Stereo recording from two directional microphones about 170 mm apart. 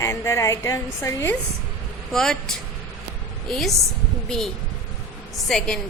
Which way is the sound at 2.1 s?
Centre (ahead or behind).